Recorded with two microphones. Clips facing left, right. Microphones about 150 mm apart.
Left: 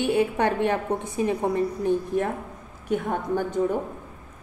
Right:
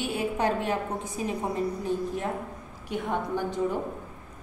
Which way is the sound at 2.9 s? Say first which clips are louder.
Left 4 dB; 50° left (ahead or behind).